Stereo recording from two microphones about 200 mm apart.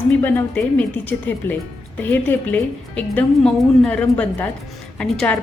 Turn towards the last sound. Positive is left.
turn(degrees=5)  # may be behind; listen again after turning